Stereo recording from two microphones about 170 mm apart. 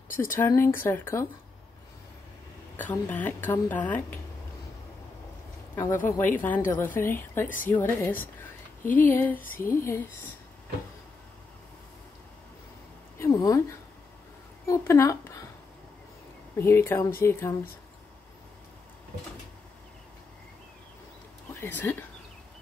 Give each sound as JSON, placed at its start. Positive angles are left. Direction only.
{"t": 0.2, "sound": "a woman's voice", "side_deg": 15}
{"t": 2.8, "sound": "a woman's voice", "side_deg": 10}
{"t": 6.0, "sound": "a woman's voice", "side_deg": 10}
{"t": 7.4, "sound": "a woman's voice", "side_deg": 50}
{"t": 7.7, "sound": "a woman's voice", "side_deg": 10}
{"t": 13.2, "sound": "a woman's voice", "side_deg": 15}
{"t": 16.5, "sound": "a woman's voice", "side_deg": 15}
{"t": 21.5, "sound": "speech", "side_deg": 15}